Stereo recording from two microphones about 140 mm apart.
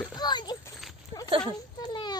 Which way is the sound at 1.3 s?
40° right (ahead or behind).